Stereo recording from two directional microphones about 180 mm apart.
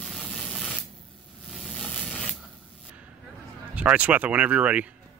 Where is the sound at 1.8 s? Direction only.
5° left (ahead or behind).